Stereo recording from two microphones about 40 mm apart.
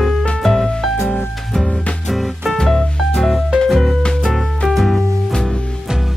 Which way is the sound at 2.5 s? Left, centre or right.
Centre.